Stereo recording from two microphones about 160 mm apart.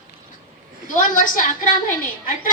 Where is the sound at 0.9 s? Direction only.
55° left (ahead or behind).